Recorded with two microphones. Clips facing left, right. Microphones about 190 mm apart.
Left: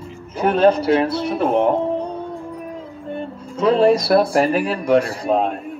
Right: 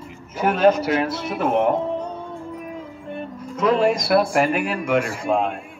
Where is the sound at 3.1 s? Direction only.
30° left (ahead or behind).